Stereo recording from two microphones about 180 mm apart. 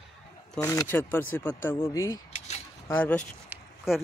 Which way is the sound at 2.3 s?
40° left (ahead or behind).